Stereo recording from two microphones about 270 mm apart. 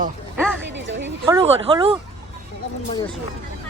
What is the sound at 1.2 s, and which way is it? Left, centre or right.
Speech, centre.